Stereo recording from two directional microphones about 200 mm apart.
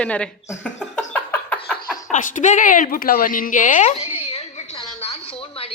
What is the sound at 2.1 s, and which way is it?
A woman's voice, 40° left (ahead or behind).